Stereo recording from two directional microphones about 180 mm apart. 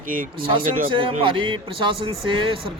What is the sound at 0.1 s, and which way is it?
Speech, 50° right (ahead or behind).